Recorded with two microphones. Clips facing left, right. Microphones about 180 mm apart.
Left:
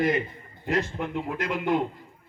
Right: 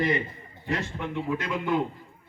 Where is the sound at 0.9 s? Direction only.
50° left (ahead or behind).